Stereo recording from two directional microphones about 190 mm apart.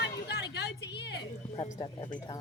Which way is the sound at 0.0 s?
60° left (ahead or behind).